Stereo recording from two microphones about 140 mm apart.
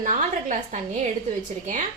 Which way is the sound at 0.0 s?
65° right (ahead or behind).